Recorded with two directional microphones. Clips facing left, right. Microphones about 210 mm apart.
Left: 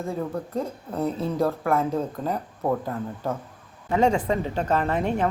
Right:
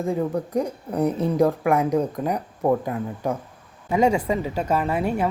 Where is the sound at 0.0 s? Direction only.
15° right (ahead or behind).